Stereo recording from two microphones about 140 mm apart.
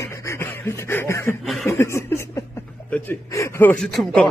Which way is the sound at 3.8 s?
Centre (ahead or behind).